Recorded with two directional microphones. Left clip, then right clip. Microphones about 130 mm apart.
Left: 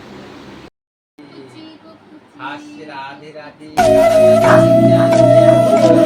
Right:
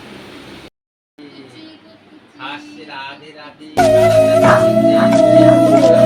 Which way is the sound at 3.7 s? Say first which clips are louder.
Even; 15° right (ahead or behind).